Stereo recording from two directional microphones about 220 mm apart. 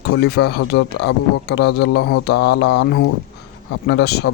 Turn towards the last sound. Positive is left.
turn(degrees=50)  # may be behind; listen again after turning